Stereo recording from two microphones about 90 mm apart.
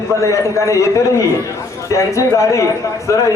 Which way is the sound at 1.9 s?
35° left (ahead or behind).